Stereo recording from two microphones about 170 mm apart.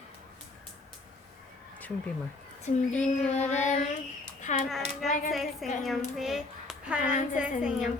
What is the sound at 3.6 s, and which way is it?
Child singing, 45° left (ahead or behind).